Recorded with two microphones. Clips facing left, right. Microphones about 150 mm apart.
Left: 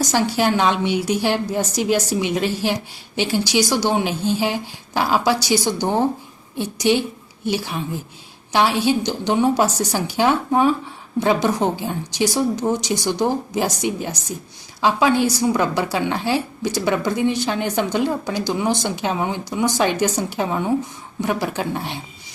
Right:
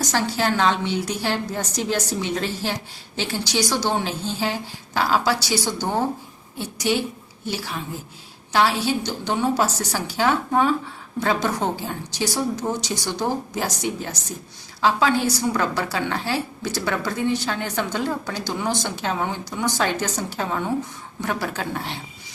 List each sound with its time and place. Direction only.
0.1 s a woman's voice: 15° left (ahead or behind)